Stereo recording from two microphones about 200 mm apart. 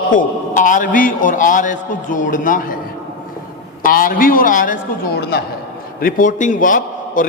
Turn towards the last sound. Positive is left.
turn(degrees=40)  # may be behind; listen again after turning